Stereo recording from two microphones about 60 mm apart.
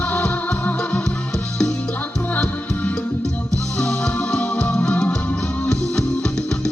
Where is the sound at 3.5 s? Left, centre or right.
Centre.